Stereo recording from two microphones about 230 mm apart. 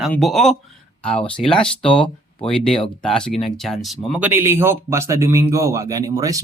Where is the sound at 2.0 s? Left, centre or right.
Left.